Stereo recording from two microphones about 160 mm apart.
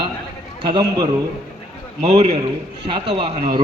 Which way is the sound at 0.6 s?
30° right (ahead or behind).